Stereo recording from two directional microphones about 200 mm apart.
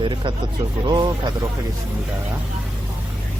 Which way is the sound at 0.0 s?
25° right (ahead or behind).